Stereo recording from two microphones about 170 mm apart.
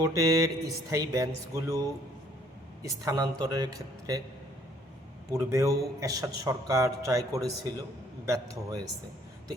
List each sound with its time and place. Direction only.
0.0 s a man's voice: 20° right (ahead or behind)
5.3 s a man's voice: 15° right (ahead or behind)